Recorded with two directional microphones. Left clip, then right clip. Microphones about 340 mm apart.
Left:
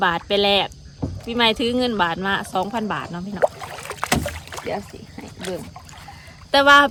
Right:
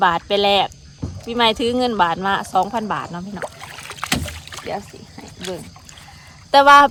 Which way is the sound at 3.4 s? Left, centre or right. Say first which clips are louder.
Left 13 dB; left.